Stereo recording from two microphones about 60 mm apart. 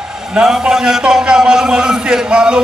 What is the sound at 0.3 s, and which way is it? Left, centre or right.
A man's voice, centre.